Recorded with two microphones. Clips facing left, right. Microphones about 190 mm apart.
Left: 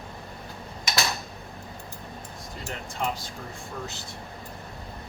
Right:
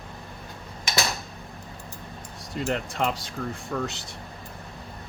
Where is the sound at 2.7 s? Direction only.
75° right (ahead or behind).